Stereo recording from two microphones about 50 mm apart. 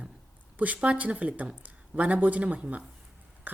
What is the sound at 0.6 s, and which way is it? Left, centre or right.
Speech, right.